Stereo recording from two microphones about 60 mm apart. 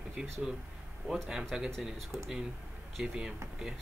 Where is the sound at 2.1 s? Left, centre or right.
Right.